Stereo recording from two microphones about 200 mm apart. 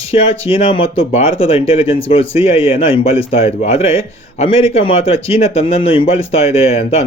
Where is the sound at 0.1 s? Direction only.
30° left (ahead or behind).